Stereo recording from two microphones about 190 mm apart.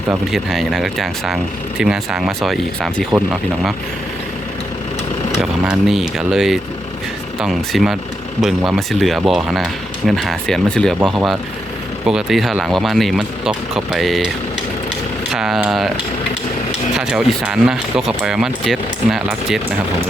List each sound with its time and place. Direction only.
0.3 s speech: centre (ahead or behind)
5.3 s speech: centre (ahead or behind)
15.3 s speech: centre (ahead or behind)
16.9 s speech: 5° right (ahead or behind)